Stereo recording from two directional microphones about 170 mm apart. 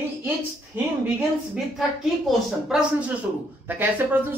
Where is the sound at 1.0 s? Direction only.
5° right (ahead or behind).